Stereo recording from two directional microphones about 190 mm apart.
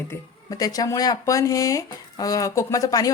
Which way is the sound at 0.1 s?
20° left (ahead or behind).